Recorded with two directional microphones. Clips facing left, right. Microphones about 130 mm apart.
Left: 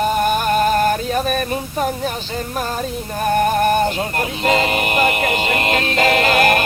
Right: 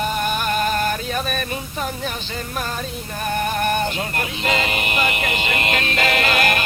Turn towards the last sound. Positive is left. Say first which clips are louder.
# left 5 dB
turn(degrees=40)  # may be behind; listen again after turning